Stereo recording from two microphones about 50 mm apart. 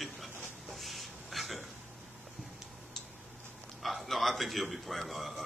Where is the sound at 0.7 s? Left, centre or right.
Centre.